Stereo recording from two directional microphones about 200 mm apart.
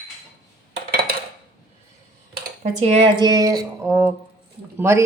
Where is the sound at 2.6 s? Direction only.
35° right (ahead or behind).